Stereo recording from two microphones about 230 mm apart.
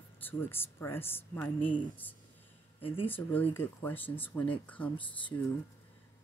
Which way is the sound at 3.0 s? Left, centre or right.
Centre.